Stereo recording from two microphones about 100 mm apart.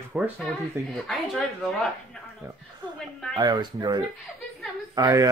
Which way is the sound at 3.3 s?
45° right (ahead or behind).